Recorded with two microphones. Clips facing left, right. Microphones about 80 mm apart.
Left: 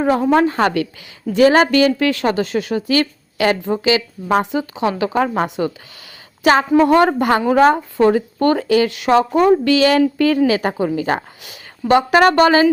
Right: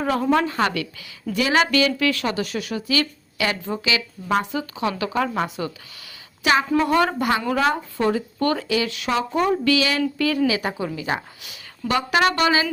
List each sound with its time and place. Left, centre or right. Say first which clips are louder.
0.0 s a woman's voice: left 6 dB; left
0.3 s a woman's voice: left 6 dB; left
8.6 s a woman's voice: left 8 dB; left
10.4 s a woman's voice: left 6 dB; left